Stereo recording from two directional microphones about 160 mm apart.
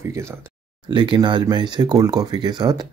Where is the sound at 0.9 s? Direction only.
30° right (ahead or behind).